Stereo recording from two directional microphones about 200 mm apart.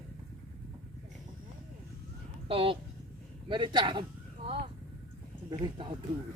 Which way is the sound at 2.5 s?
25° right (ahead or behind).